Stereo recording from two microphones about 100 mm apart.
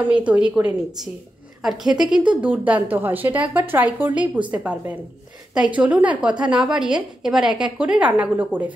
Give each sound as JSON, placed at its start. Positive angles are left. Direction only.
{"t": 0.0, "sound": "a woman's voice", "side_deg": -15}
{"t": 1.9, "sound": "a woman's voice", "side_deg": -5}